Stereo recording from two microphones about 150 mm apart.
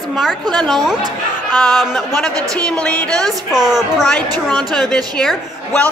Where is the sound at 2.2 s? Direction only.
5° left (ahead or behind).